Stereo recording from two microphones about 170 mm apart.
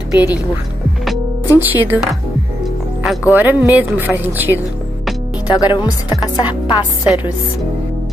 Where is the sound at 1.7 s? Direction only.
10° right (ahead or behind).